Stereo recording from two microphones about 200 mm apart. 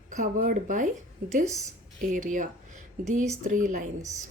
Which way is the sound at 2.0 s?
40° right (ahead or behind).